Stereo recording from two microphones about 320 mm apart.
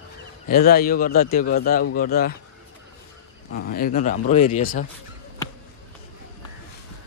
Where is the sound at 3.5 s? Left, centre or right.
Left.